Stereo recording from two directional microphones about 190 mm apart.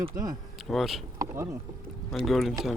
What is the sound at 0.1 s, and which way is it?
Speech, 45° right (ahead or behind).